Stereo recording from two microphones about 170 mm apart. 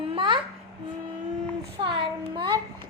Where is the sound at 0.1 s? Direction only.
30° right (ahead or behind).